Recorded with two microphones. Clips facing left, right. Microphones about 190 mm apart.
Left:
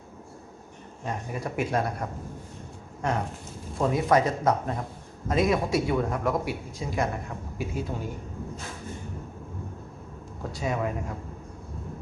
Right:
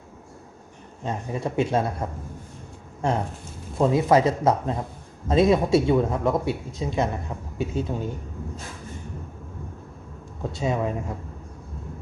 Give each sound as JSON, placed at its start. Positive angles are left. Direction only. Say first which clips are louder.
{"t": 1.0, "sound": "a man's voice", "louder": "right 4 dB", "side_deg": -25}
{"t": 10.5, "sound": "a man's voice", "louder": "right 3 dB", "side_deg": -25}